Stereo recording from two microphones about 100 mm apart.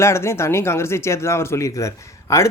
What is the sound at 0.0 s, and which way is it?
Speech, 25° left (ahead or behind).